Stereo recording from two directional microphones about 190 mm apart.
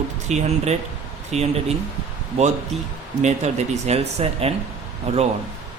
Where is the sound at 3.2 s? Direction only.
35° right (ahead or behind).